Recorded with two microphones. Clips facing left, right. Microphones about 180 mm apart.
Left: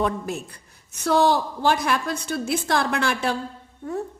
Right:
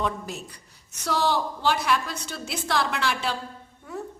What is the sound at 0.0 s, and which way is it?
A woman's voice, 50° left (ahead or behind).